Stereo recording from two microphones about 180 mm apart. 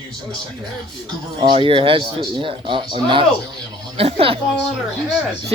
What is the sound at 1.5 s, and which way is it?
Speech, 30° right (ahead or behind).